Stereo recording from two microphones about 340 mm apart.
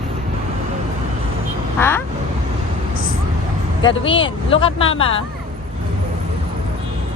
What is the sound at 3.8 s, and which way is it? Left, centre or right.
Speech, centre.